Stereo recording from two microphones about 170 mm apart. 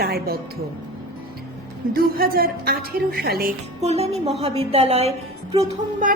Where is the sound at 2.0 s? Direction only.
60° right (ahead or behind).